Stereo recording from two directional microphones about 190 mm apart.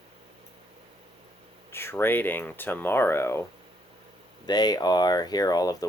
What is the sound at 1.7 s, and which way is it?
Speech, 10° left (ahead or behind).